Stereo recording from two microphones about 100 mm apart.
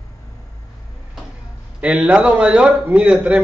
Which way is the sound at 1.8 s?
15° right (ahead or behind).